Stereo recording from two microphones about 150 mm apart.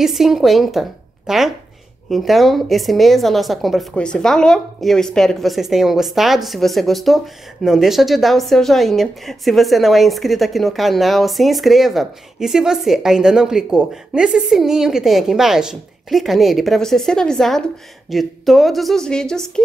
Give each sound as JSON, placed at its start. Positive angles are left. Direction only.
{"t": 0.0, "sound": "a woman's voice", "side_deg": 0}